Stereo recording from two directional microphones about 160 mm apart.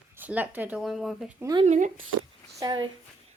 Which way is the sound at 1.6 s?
50° right (ahead or behind).